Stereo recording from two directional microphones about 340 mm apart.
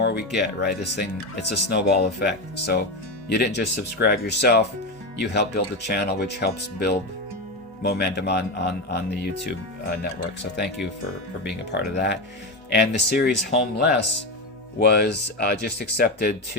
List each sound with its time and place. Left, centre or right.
0.0 s music: left
0.3 s speech: left
11.7 s speech: left